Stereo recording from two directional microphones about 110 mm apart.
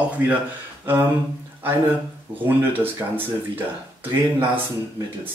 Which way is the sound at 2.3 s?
20° right (ahead or behind).